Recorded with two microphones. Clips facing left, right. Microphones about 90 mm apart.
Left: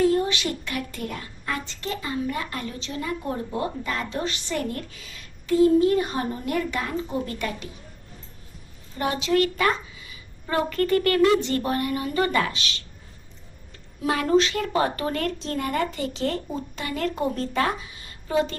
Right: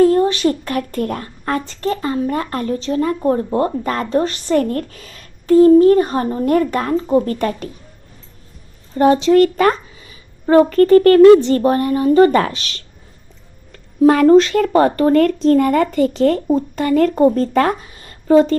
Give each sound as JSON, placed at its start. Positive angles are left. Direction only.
{"t": 0.0, "sound": "a woman's voice", "side_deg": -45}
{"t": 9.0, "sound": "a woman's voice", "side_deg": -35}